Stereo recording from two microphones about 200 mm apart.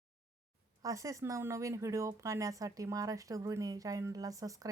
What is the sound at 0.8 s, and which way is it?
Speech, 15° right (ahead or behind).